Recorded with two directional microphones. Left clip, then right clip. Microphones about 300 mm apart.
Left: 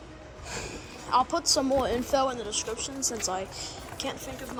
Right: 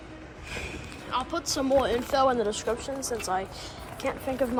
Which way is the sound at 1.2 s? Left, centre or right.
Centre.